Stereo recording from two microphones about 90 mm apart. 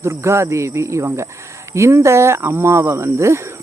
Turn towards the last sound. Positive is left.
turn(degrees=-30)  # may be behind; listen again after turning